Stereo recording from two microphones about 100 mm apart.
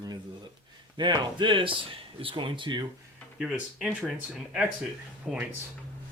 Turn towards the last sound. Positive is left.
turn(degrees=0)  # may be behind; listen again after turning